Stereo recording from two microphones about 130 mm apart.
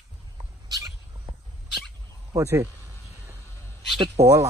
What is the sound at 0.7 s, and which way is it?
Cat, 30° right (ahead or behind).